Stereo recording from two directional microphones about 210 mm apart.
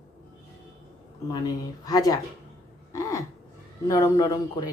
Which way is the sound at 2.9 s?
15° left (ahead or behind).